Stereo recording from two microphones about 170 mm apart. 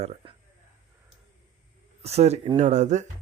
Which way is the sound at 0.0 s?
40° right (ahead or behind).